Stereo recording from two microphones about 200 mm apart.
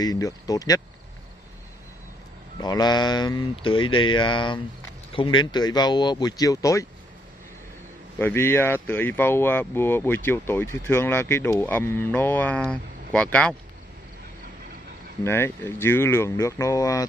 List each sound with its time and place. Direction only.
0.0 s speech: 20° left (ahead or behind)
2.6 s speech: 20° left (ahead or behind)
8.2 s speech: 10° left (ahead or behind)
15.2 s speech: 10° left (ahead or behind)